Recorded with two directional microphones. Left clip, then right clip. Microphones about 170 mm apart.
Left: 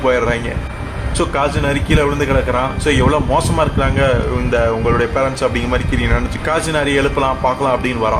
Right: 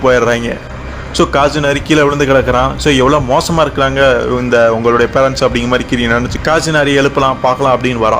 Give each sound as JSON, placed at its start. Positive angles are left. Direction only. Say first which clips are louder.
{"t": 0.0, "sound": "a man's voice", "louder": "right 5 dB", "side_deg": -35}